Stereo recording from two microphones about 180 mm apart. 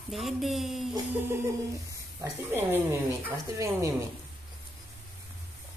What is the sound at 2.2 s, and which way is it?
Speech, 15° right (ahead or behind).